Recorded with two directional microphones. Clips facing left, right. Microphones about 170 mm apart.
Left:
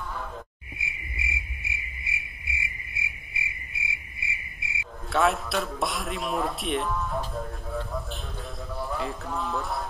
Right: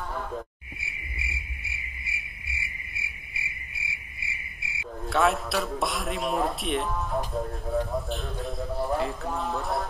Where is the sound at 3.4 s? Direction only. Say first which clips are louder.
Left 3 dB; 20° left (ahead or behind).